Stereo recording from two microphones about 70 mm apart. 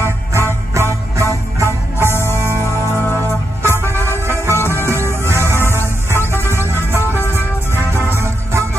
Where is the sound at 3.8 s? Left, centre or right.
Left.